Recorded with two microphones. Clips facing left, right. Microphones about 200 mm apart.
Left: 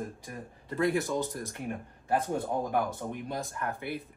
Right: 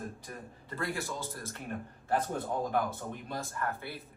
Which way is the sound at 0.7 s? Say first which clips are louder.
Left 9 dB; 20° left (ahead or behind).